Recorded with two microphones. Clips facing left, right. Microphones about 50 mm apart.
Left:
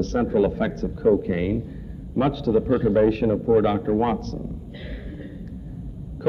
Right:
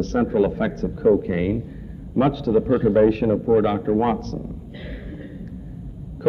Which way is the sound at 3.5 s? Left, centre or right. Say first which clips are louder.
Right 1 dB; centre.